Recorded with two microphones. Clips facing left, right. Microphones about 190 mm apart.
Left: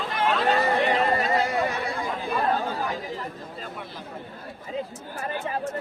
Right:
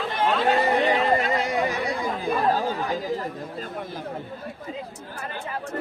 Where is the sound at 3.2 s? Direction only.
45° right (ahead or behind).